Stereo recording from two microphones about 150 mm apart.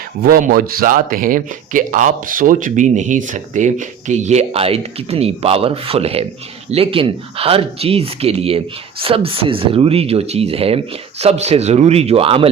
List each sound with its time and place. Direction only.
0.2 s speech: 75° right (ahead or behind); by 12.5 s 40° right (ahead or behind)